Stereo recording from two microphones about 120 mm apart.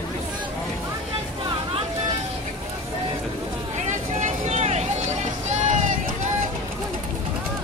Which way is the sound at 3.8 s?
90° right.